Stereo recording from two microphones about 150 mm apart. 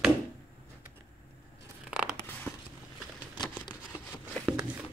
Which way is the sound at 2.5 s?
10° left (ahead or behind).